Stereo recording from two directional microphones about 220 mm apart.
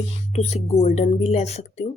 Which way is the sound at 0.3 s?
30° left (ahead or behind).